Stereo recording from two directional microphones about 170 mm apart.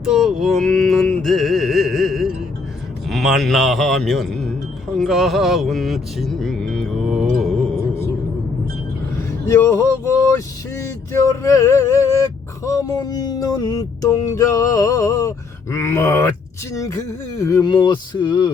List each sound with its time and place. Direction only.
0.0 s music: centre (ahead or behind)
3.1 s speech: centre (ahead or behind)
4.9 s music: centre (ahead or behind)
9.1 s speech: 15° left (ahead or behind)
10.8 s a sound: 15° left (ahead or behind)